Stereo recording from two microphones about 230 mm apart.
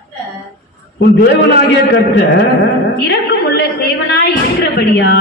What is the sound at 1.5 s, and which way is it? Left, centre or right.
A woman's voice, left.